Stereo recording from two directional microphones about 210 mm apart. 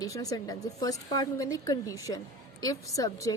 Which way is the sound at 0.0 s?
15° left (ahead or behind).